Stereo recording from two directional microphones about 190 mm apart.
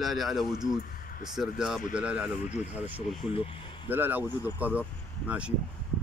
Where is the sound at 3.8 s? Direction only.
10° right (ahead or behind).